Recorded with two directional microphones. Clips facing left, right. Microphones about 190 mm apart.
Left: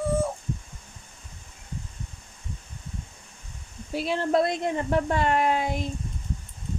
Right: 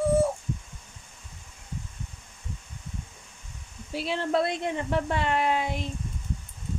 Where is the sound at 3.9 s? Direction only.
50° left (ahead or behind).